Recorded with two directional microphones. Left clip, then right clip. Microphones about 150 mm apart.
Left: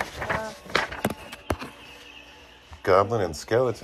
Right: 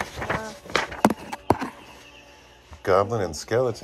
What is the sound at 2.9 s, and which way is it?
Speech, 25° right (ahead or behind).